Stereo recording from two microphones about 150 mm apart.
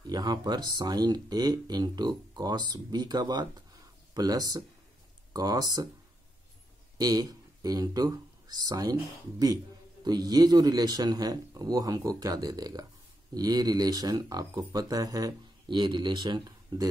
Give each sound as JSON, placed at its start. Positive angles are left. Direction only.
{"t": 0.0, "sound": "speech", "side_deg": -25}
{"t": 7.0, "sound": "speech", "side_deg": -25}
{"t": 10.0, "sound": "speech", "side_deg": -25}